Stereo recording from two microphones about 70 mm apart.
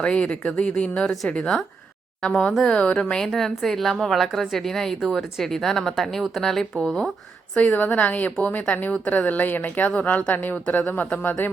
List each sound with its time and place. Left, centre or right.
0.0 s a woman's voice: centre
7.5 s a woman's voice: left